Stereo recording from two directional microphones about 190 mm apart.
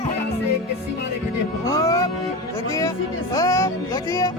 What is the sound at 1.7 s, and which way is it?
Music, 15° left (ahead or behind).